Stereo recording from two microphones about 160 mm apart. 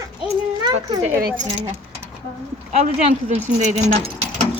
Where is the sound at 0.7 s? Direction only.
40° right (ahead or behind).